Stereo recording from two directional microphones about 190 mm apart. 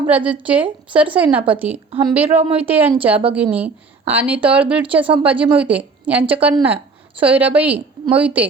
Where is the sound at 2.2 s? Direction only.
30° right (ahead or behind).